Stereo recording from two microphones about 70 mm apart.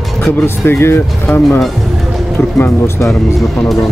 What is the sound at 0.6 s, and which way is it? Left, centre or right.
Speech, left.